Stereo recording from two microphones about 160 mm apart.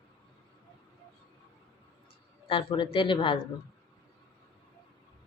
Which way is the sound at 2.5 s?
30° left (ahead or behind).